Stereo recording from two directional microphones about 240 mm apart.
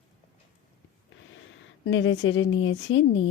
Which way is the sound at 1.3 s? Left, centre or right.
Left.